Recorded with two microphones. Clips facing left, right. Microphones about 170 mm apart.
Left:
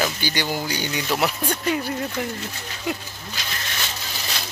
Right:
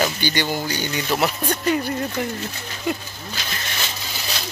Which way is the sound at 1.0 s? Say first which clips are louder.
Right 2 dB; 10° right (ahead or behind).